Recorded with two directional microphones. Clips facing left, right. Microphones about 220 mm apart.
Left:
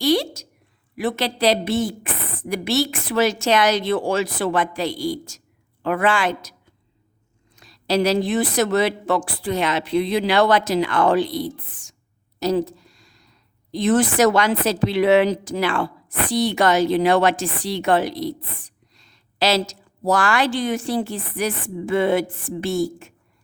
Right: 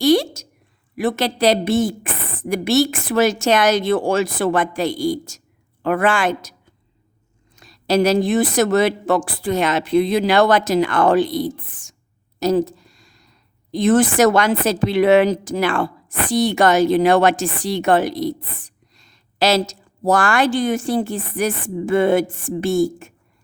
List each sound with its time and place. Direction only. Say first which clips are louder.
0.0 s a sound: right 4 dB; 50° right (ahead or behind)
0.9 s a woman's voice: right 3 dB; 50° right (ahead or behind)
7.5 s a woman's voice: right 3 dB; 45° right (ahead or behind)